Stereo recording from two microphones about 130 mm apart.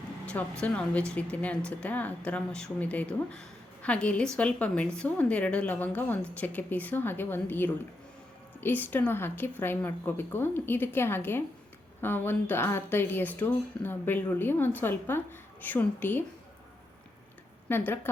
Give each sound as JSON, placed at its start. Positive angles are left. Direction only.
{"t": 0.6, "sound": "speech", "side_deg": 10}
{"t": 17.7, "sound": "speech", "side_deg": 15}